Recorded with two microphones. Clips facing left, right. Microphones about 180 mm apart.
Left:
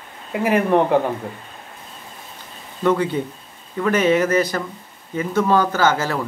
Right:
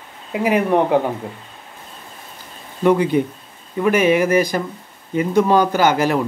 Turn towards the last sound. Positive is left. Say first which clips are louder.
# right 3 dB
turn(degrees=-15)  # may be behind; listen again after turning